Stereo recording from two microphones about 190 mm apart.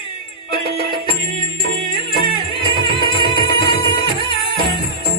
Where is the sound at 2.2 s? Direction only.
25° left (ahead or behind).